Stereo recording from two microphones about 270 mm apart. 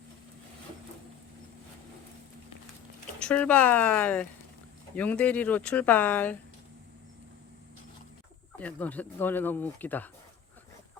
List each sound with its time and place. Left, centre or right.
3.2 s speech: centre
8.5 s speech: centre